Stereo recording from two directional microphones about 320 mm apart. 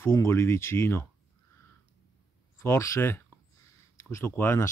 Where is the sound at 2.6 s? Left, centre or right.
Centre.